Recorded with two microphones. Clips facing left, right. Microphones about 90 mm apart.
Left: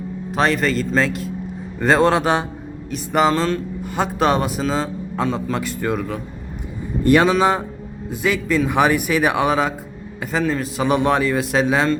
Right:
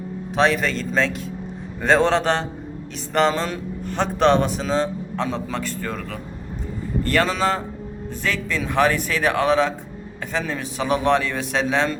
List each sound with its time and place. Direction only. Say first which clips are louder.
0.3 s a man's voice: left 1 dB; centre (ahead or behind)